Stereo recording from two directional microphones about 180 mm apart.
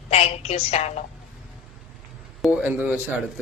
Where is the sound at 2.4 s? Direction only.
10° right (ahead or behind).